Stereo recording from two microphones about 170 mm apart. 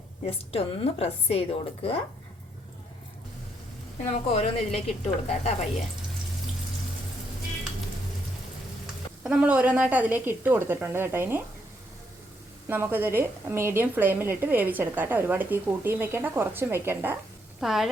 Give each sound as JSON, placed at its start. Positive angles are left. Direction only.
{"t": 0.3, "sound": "a woman's voice", "side_deg": 35}
{"t": 4.1, "sound": "a woman's voice", "side_deg": 40}
{"t": 9.2, "sound": "a woman's voice", "side_deg": -5}
{"t": 12.6, "sound": "a woman's voice", "side_deg": -15}
{"t": 17.6, "sound": "speech", "side_deg": 0}